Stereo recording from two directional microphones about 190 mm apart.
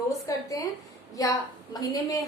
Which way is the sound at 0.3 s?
15° left (ahead or behind).